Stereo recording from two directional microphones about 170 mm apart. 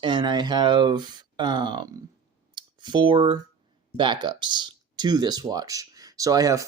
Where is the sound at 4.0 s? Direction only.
30° right (ahead or behind).